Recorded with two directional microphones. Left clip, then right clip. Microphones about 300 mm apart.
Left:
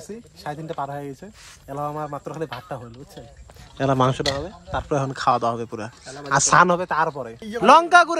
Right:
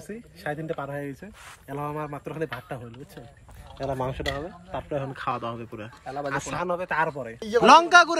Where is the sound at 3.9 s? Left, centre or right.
Left.